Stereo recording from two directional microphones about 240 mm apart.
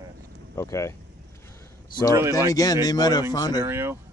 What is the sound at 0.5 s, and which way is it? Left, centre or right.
Speech, centre.